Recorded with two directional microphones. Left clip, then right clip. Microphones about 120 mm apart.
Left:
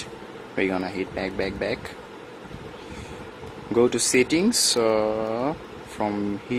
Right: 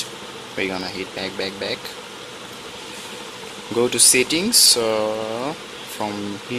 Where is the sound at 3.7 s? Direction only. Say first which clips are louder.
Right 2 dB; 45° left (ahead or behind).